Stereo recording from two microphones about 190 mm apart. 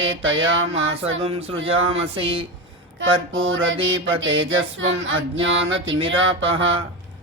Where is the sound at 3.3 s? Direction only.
90° right.